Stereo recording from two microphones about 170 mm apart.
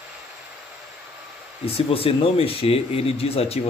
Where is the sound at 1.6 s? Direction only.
35° left (ahead or behind).